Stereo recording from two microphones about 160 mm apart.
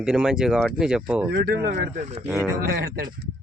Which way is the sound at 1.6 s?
50° right (ahead or behind).